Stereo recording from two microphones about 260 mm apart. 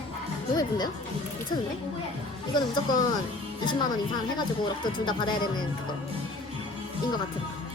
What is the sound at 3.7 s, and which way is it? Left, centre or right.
Speech, centre.